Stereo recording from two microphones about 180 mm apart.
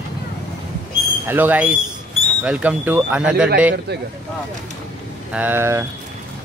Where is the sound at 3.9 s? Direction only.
65° right (ahead or behind).